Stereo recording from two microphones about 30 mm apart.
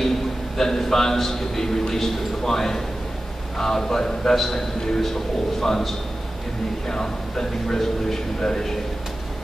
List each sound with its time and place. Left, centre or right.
0.6 s a man's voice: centre